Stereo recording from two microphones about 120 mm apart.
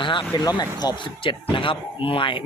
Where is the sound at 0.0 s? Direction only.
40° left (ahead or behind).